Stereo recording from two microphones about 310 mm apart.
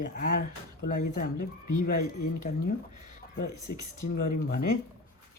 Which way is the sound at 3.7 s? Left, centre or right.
Left.